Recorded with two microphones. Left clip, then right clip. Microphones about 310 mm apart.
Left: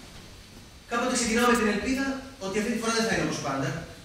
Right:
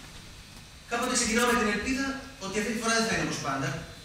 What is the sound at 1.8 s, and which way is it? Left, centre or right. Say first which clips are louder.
A man's voice: left 2 dB; right.